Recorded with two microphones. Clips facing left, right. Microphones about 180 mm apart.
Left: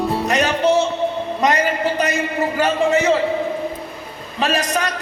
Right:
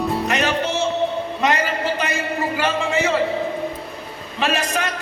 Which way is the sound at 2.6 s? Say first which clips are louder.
Left 5 dB; 40° left (ahead or behind).